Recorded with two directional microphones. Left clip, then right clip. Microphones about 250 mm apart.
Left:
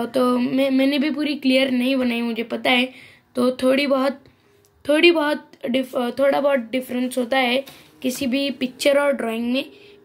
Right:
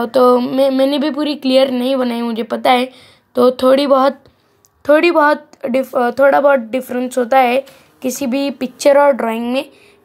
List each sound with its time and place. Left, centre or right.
0.0 s speech: right